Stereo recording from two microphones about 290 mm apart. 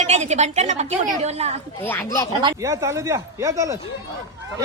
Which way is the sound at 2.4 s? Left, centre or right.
Centre.